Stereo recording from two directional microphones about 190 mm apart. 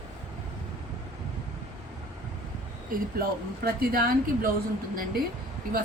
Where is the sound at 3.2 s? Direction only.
50° right (ahead or behind).